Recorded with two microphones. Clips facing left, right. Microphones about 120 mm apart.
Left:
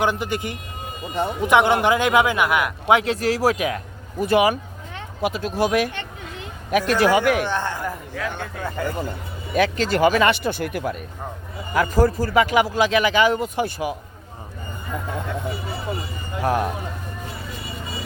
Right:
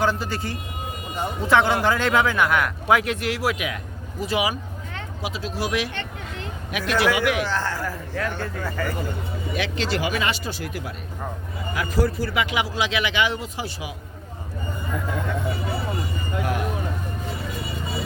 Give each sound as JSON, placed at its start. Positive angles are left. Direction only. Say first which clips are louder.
{"t": 0.0, "sound": "speech", "louder": "left 1 dB", "side_deg": 20}
{"t": 2.8, "sound": "a man's voice", "louder": "left 5 dB", "side_deg": 25}
{"t": 4.2, "sound": "speech", "louder": "left 7 dB", "side_deg": 50}
{"t": 7.5, "sound": "speech", "louder": "left 1 dB", "side_deg": 20}
{"t": 8.1, "sound": "speech", "louder": "right 1 dB", "side_deg": 0}
{"t": 8.6, "sound": "speech", "louder": "left 3 dB", "side_deg": 20}
{"t": 9.6, "sound": "speech", "louder": "left 8 dB", "side_deg": 45}
{"t": 16.4, "sound": "a man's voice", "louder": "left 6 dB", "side_deg": 40}